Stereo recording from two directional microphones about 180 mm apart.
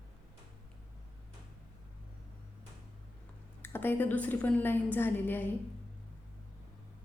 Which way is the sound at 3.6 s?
10° left (ahead or behind).